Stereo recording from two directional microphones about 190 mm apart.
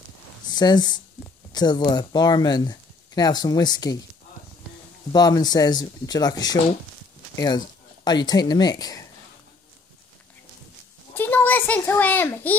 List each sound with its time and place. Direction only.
0.5 s speech: 20° left (ahead or behind)
5.1 s speech: 20° left (ahead or behind)
11.1 s a child's voice: 10° left (ahead or behind)